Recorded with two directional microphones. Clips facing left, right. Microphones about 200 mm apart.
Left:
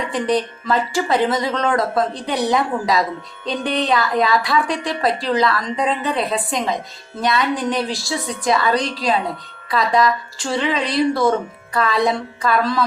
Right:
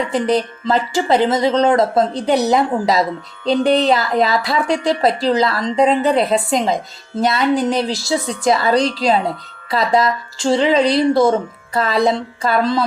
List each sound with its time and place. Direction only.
0.1 s speech: 25° right (ahead or behind)